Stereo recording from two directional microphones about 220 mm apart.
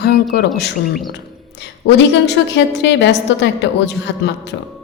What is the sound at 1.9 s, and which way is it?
A woman's voice, 50° left (ahead or behind).